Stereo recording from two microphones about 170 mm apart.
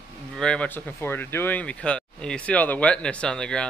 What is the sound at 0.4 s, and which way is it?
Speech, 5° left (ahead or behind).